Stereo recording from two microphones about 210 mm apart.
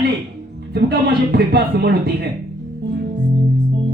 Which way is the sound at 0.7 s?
50° right (ahead or behind).